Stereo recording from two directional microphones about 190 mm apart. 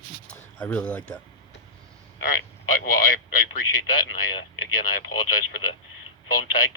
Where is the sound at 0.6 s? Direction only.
5° left (ahead or behind).